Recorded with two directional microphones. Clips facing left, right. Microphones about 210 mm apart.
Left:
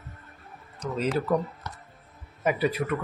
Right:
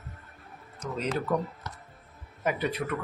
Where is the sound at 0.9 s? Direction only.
5° left (ahead or behind).